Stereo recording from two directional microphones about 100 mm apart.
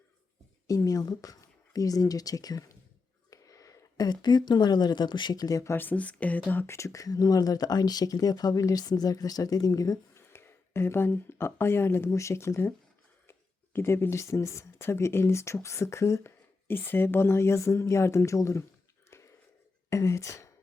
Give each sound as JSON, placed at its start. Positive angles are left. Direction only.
{"t": 0.7, "sound": "speech", "side_deg": 35}
{"t": 5.7, "sound": "speech", "side_deg": 20}
{"t": 10.3, "sound": "speech", "side_deg": 25}
{"t": 13.7, "sound": "speech", "side_deg": 25}
{"t": 19.1, "sound": "a sound", "side_deg": 30}
{"t": 19.9, "sound": "speech", "side_deg": 30}